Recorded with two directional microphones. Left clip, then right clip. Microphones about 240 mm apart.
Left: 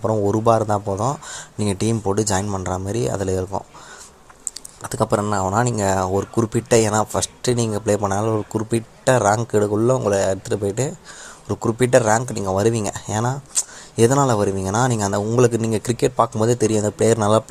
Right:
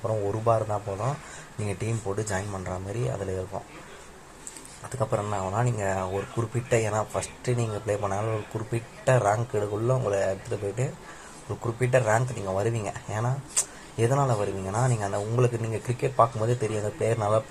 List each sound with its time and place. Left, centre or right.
0.0 s speech: left
4.8 s speech: left
11.4 s speech: left